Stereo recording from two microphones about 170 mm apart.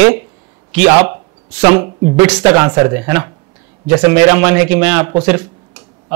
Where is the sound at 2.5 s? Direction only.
20° right (ahead or behind).